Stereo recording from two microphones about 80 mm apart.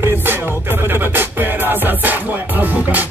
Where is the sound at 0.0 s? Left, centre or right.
Right.